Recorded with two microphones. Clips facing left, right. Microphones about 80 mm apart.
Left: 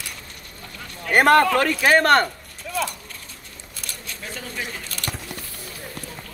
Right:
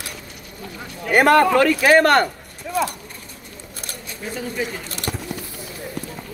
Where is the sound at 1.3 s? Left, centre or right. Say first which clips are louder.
Right 1 dB; right.